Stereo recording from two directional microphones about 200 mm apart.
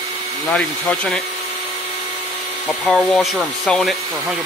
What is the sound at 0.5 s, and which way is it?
Speech, 5° left (ahead or behind).